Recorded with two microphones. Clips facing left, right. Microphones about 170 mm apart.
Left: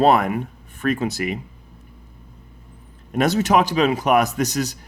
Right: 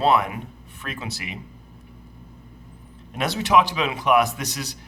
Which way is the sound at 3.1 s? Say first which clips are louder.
Left 3 dB; 45° left (ahead or behind).